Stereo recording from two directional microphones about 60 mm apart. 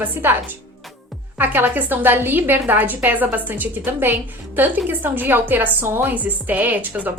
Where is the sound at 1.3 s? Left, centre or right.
Right.